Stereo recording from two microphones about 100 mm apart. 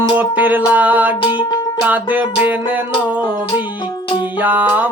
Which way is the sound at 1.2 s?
50° left (ahead or behind).